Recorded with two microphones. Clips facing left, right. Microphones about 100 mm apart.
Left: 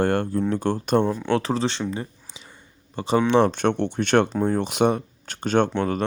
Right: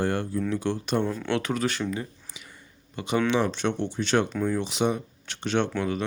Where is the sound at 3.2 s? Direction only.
45° left (ahead or behind).